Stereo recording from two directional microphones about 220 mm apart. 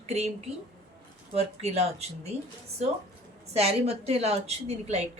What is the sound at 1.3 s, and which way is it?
Speech, 30° right (ahead or behind).